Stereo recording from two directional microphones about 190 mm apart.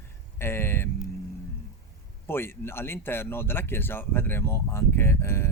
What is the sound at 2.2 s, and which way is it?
Speech, 10° left (ahead or behind).